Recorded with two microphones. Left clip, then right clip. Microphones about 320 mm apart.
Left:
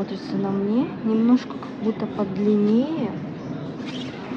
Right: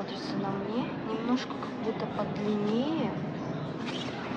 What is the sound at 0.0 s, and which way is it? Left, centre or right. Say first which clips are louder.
Speech: left 6 dB; centre.